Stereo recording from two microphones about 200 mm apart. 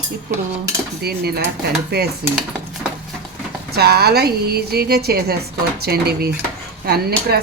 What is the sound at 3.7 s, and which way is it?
A woman's voice, 55° right (ahead or behind).